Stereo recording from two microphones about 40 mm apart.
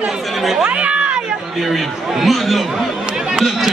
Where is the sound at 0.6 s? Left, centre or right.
Right.